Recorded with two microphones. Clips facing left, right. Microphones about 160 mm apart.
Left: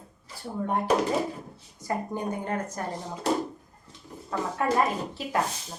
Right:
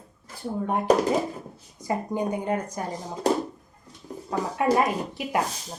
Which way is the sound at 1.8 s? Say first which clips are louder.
Right 3 dB; 15° right (ahead or behind).